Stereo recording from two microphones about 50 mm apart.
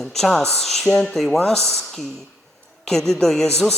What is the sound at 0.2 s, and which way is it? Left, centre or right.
Speech, centre.